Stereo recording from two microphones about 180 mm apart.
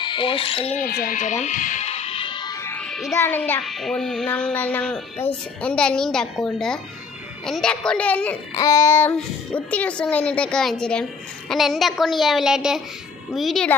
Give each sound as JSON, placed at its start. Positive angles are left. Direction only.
{"t": 0.0, "sound": "speech", "side_deg": 25}
{"t": 0.8, "sound": "music", "side_deg": 55}
{"t": 2.6, "sound": "music", "side_deg": 5}
{"t": 3.2, "sound": "a child's voice", "side_deg": 10}
{"t": 3.6, "sound": "a woman's voice", "side_deg": 0}